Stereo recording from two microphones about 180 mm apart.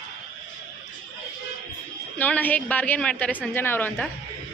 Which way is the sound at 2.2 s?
10° left (ahead or behind).